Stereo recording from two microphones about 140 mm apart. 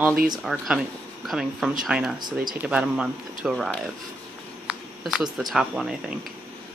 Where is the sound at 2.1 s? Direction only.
30° right (ahead or behind).